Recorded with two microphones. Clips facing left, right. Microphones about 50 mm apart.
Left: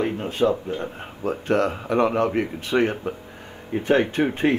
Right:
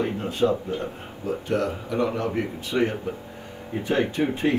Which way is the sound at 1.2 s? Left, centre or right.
Left.